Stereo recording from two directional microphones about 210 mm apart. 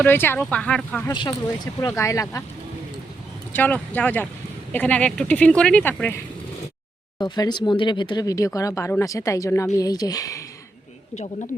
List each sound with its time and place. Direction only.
0.0 s speech: 10° left (ahead or behind)
1.1 s speech: 20° left (ahead or behind)
3.5 s speech: 10° left (ahead or behind)
7.2 s speech: 20° left (ahead or behind)